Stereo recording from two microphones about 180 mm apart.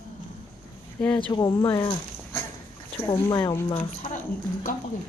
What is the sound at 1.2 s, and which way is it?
Speech, 25° left (ahead or behind).